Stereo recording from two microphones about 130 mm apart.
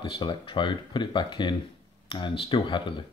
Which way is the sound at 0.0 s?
40° left (ahead or behind).